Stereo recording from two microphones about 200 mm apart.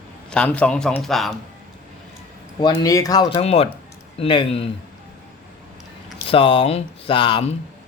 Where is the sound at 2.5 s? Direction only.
20° left (ahead or behind).